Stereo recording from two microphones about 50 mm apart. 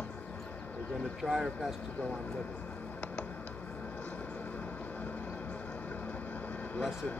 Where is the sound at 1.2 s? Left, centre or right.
Centre.